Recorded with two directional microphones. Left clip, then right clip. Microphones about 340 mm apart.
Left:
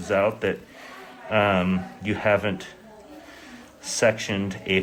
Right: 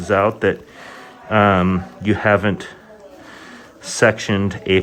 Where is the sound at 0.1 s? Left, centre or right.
Right.